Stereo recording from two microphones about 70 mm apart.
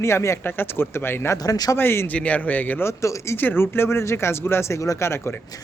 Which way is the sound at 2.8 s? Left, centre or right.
Left.